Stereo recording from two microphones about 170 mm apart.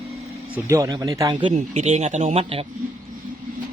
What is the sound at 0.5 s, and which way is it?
Speech, 20° right (ahead or behind).